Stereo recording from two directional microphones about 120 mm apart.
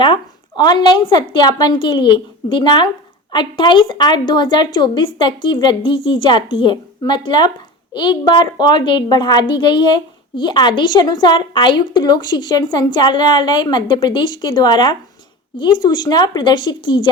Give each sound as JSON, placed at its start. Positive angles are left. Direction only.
{"t": 0.0, "sound": "a woman's voice", "side_deg": 40}